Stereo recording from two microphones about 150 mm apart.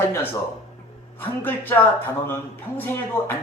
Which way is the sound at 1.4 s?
10° left (ahead or behind).